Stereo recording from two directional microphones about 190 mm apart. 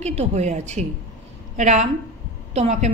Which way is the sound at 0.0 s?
35° right (ahead or behind).